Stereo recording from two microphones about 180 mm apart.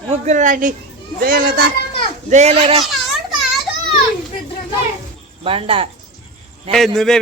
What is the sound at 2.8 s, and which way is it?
Children playing, centre (ahead or behind).